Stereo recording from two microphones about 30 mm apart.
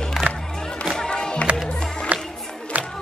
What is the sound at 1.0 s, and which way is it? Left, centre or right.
Music, left.